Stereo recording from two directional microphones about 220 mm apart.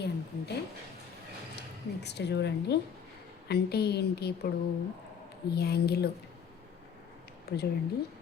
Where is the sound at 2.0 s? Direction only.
50° left (ahead or behind).